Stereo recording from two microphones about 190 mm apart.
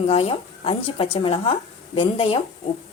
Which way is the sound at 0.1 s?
30° left (ahead or behind).